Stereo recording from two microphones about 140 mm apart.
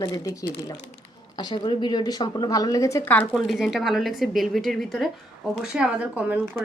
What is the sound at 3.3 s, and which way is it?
A woman's voice, centre (ahead or behind).